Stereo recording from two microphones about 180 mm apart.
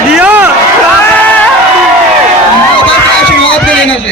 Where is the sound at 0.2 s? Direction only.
10° right (ahead or behind).